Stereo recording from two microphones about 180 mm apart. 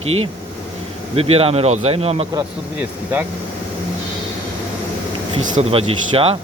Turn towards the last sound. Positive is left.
turn(degrees=-30)  # may be behind; listen again after turning